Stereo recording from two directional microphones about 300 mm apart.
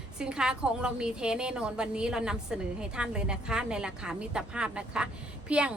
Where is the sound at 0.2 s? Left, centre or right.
Centre.